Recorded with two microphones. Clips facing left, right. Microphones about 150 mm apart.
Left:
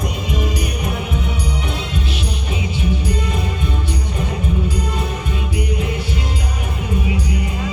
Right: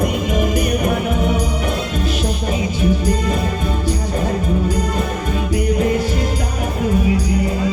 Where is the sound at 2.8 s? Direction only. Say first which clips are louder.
Right 4 dB; 40° right (ahead or behind).